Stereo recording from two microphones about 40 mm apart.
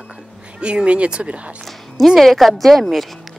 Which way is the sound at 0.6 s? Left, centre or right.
Right.